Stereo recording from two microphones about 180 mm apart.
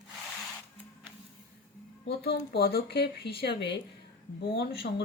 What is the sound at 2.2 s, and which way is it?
Speech, 60° left (ahead or behind).